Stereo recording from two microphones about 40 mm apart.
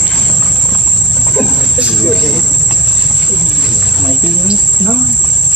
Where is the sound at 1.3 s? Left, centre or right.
Centre.